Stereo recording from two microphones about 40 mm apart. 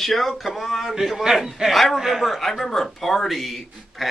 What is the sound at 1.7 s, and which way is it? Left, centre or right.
Speech, centre.